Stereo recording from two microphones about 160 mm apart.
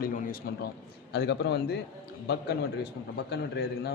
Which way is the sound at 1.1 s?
90° left.